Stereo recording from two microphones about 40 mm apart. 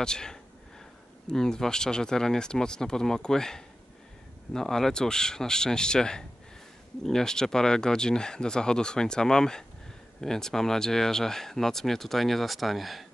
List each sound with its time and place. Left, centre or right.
0.0 s speech: centre